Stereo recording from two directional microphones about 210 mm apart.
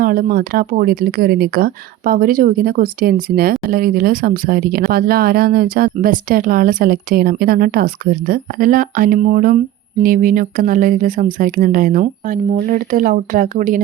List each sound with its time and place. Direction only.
0.0 s speech: 45° right (ahead or behind)